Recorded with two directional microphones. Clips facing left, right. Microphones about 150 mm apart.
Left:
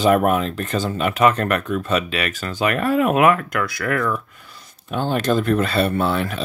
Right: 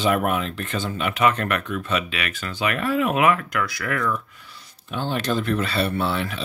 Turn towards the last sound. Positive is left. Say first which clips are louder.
# left 4 dB
turn(degrees=45)  # may be behind; listen again after turning